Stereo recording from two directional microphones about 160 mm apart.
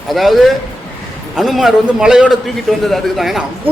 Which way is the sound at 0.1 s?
Centre (ahead or behind).